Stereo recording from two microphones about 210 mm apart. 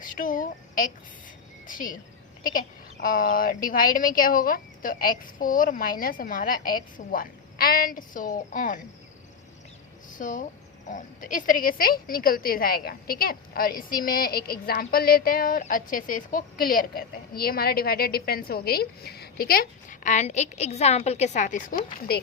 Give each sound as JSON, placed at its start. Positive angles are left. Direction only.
{"t": 0.0, "sound": "a sound", "side_deg": 40}
{"t": 1.6, "sound": "speech", "side_deg": 40}
{"t": 3.0, "sound": "speech", "side_deg": 40}
{"t": 10.1, "sound": "speech", "side_deg": 40}